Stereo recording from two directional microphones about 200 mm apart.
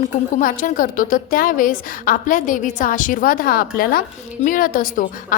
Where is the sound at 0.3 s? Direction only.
40° left (ahead or behind).